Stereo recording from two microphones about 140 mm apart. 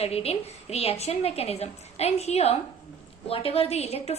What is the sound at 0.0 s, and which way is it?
A woman's voice, 45° left (ahead or behind).